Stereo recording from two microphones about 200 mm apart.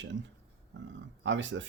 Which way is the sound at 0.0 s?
65° right (ahead or behind).